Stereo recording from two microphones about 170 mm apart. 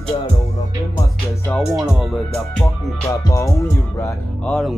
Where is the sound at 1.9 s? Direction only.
Centre (ahead or behind).